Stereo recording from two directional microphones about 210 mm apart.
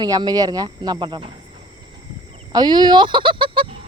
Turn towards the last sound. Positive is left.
turn(degrees=-25)  # may be behind; listen again after turning